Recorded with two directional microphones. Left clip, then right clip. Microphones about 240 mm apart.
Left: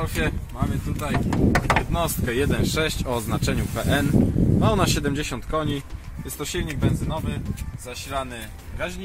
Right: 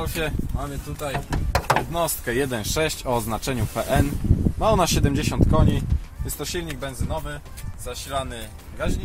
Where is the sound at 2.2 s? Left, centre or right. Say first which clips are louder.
Left 1 dB; right.